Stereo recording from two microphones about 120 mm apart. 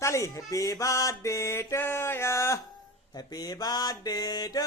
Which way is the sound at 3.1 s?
35° left (ahead or behind).